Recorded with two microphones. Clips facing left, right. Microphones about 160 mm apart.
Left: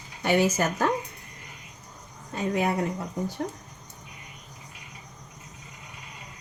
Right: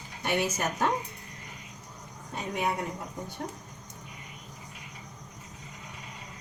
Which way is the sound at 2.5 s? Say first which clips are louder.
Left 4 dB; 90° left.